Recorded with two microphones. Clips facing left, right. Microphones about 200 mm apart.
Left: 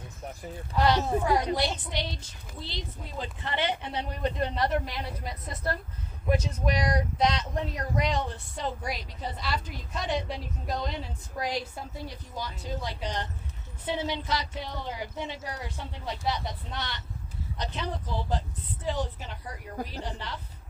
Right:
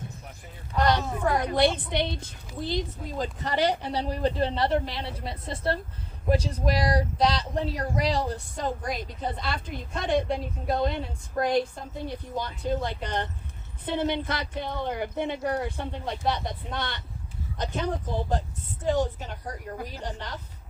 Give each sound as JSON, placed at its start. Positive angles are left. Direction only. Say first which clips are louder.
{"t": 1.0, "sound": "a woman's voice", "louder": "left 1 dB", "side_deg": 30}
{"t": 1.5, "sound": "speech", "louder": "right 7 dB", "side_deg": -55}